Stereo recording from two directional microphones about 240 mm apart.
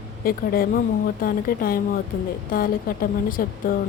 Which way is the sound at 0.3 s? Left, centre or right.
Left.